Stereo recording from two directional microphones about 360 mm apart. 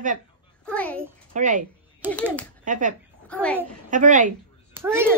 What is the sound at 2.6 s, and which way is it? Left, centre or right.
Speech, right.